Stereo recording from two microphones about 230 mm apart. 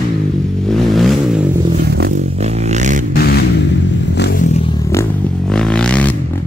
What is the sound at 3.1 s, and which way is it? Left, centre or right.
Vehicle, left.